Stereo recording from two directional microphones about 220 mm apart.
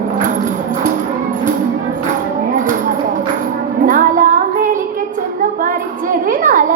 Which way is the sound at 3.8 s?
40° right (ahead or behind).